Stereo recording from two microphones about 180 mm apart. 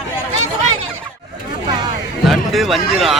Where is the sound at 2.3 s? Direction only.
Centre (ahead or behind).